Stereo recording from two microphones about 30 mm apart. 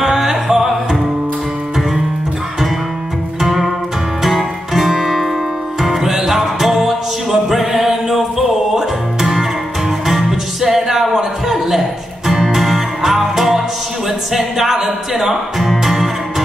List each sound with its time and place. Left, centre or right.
0.0 s music: centre
3.3 s music: centre
12.5 s music: centre